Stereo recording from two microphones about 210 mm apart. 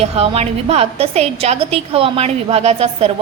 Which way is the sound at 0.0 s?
30° right (ahead or behind).